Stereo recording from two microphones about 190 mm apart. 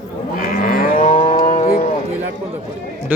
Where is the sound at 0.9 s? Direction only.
30° left (ahead or behind).